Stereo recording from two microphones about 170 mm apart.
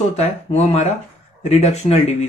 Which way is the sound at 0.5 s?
35° left (ahead or behind).